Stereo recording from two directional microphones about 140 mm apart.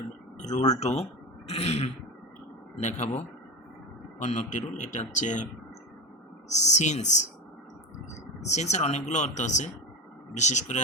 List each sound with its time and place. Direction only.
0.3 s a sound: 55° left (ahead or behind)
0.7 s throat clearing: 50° left (ahead or behind)
2.8 s speech: 55° left (ahead or behind)
4.2 s speech: 60° left (ahead or behind)
6.5 s speech: 55° left (ahead or behind)